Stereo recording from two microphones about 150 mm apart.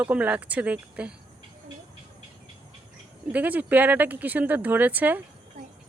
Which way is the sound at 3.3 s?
10° right (ahead or behind).